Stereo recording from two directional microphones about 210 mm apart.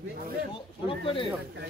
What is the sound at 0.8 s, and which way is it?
Speech, 25° left (ahead or behind).